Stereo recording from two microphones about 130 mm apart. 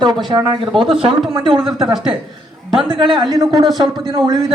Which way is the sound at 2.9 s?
40° right (ahead or behind).